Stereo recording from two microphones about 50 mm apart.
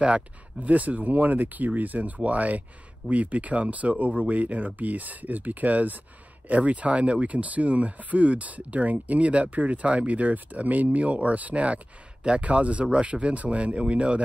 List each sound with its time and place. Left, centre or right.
0.0 s speech: right